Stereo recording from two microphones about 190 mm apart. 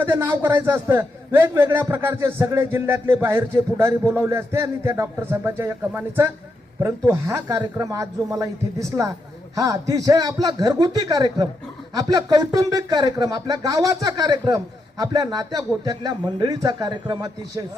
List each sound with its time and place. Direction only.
0.0 s a man's voice: 10° right (ahead or behind)